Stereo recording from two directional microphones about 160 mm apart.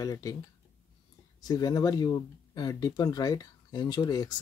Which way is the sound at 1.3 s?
25° left (ahead or behind).